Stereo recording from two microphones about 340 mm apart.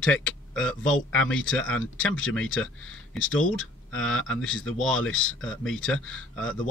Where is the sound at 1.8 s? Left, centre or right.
Left.